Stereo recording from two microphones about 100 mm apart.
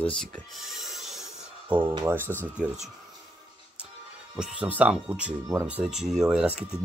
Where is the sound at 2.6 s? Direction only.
10° right (ahead or behind).